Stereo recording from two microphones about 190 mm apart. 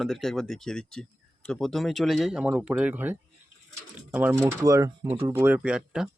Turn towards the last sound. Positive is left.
turn(degrees=-5)  # may be behind; listen again after turning